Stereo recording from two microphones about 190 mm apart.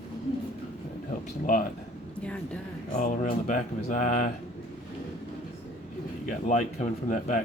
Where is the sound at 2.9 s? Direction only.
40° left (ahead or behind).